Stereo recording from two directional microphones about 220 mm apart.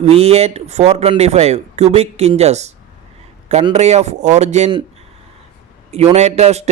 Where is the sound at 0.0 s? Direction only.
30° right (ahead or behind).